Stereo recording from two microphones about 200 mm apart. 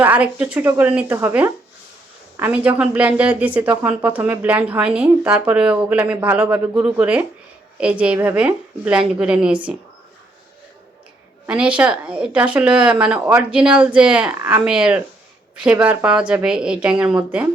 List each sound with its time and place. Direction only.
0.0 s speech: 5° right (ahead or behind)
2.6 s speech: 5° right (ahead or behind)
11.4 s speech: 5° right (ahead or behind)